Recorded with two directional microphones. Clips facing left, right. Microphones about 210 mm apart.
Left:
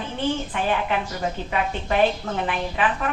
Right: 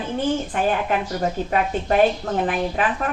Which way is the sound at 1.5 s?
45° right (ahead or behind).